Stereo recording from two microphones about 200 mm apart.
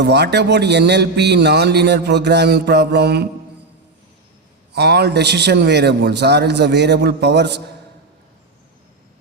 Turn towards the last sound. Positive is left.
turn(degrees=-60)  # may be behind; listen again after turning